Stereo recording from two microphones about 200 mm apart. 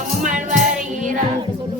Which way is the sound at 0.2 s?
40° right (ahead or behind).